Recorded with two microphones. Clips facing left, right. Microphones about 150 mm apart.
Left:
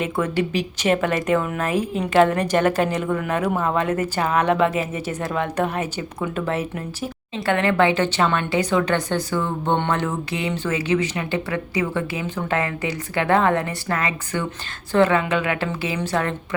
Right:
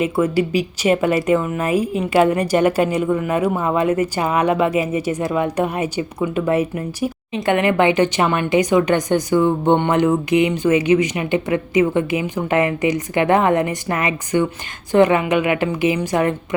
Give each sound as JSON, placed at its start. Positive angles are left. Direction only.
{"t": 0.0, "sound": "speech", "side_deg": -10}